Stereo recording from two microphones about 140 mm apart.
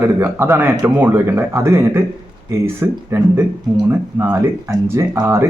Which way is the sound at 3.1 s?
20° right (ahead or behind).